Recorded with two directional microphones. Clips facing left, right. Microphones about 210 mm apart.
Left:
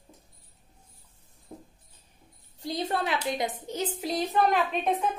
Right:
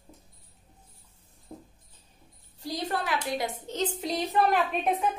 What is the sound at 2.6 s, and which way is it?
Speech, 20° left (ahead or behind).